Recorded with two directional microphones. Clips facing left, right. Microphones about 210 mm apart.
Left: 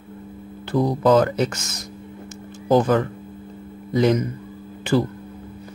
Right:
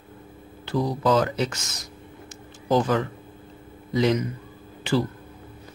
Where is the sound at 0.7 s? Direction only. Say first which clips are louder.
Left 5 dB; 55° left (ahead or behind).